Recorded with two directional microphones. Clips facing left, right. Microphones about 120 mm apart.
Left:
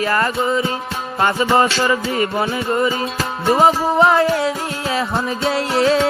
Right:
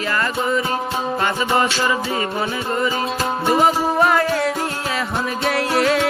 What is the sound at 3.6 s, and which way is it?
Music, 25° left (ahead or behind).